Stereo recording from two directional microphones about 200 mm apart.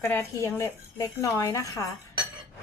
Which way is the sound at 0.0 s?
10° left (ahead or behind).